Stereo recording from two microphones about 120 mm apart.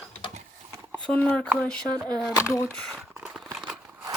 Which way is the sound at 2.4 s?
25° left (ahead or behind).